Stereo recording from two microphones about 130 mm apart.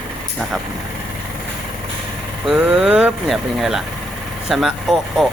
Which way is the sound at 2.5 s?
5° right (ahead or behind).